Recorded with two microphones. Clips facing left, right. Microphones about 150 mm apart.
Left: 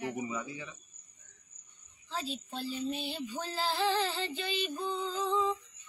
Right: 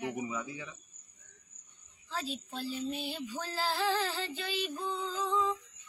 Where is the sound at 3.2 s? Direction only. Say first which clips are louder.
Left 1 dB; 15° left (ahead or behind).